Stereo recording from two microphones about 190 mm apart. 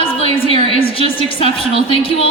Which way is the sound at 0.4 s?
30° left (ahead or behind).